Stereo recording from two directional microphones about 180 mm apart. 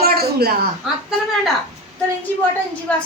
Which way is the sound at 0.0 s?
60° right (ahead or behind).